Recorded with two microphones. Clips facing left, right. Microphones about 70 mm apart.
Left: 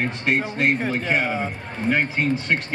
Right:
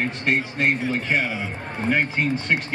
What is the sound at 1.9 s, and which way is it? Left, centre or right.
Speech, centre.